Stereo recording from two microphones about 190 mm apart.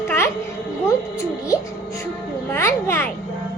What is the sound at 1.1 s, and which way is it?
Music, 15° left (ahead or behind).